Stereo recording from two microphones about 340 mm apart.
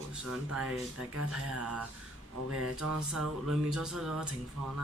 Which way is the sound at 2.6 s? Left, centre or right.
Right.